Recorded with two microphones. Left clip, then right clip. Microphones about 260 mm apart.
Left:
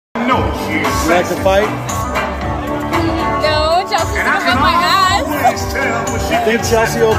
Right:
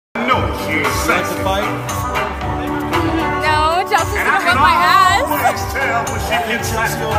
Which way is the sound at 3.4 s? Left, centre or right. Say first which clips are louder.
Left 1 dB; centre.